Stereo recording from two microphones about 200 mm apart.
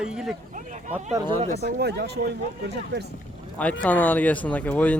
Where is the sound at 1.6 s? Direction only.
55° right (ahead or behind).